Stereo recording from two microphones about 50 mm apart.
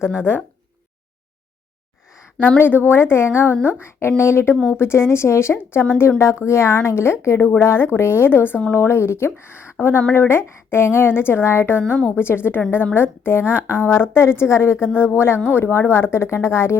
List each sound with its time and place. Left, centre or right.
0.0 s speech: centre
2.6 s a woman's voice: left
6.4 s a woman's voice: left